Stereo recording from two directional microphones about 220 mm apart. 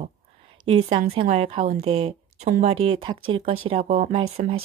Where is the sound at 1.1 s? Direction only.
30° right (ahead or behind).